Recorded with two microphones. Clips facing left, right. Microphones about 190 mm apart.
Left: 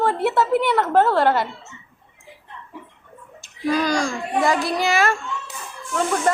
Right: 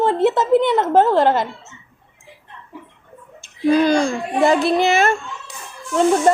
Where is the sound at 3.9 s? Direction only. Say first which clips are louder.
Right 5 dB; 60° right (ahead or behind).